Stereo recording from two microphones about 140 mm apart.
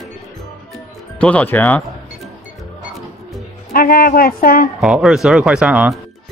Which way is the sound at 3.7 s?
90° left.